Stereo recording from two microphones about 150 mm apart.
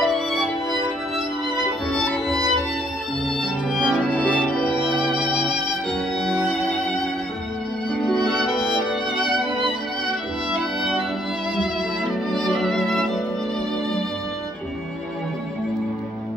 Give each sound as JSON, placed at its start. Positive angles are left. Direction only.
{"t": 0.0, "sound": "music", "side_deg": 0}
{"t": 3.7, "sound": "music", "side_deg": -5}
{"t": 5.1, "sound": "music", "side_deg": -30}
{"t": 8.0, "sound": "music", "side_deg": 0}
{"t": 10.5, "sound": "music", "side_deg": 0}
{"t": 12.3, "sound": "music", "side_deg": 0}